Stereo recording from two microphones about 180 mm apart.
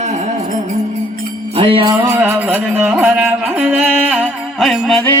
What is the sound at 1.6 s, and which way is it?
Jingle bell, 30° right (ahead or behind).